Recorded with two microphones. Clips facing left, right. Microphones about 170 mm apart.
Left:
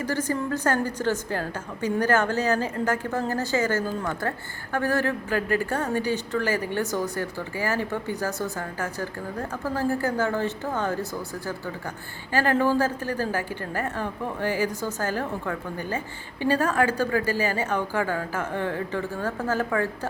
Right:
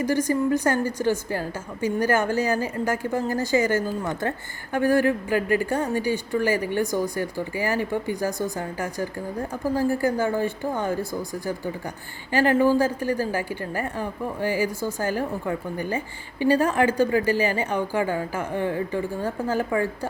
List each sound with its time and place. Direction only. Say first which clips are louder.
0.0 s a woman's voice: right 5 dB; 15° right (ahead or behind)